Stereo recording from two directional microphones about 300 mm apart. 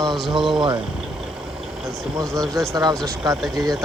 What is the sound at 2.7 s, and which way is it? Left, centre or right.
Speech, centre.